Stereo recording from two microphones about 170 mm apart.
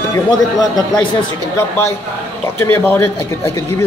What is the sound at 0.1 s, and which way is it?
Speech, 25° left (ahead or behind).